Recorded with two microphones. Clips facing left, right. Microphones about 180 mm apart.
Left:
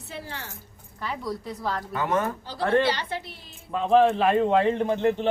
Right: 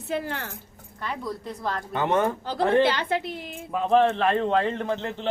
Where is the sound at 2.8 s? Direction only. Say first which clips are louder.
Right 3 dB; 55° right (ahead or behind).